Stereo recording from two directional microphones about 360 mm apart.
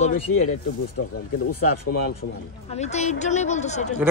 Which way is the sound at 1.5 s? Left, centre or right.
Left.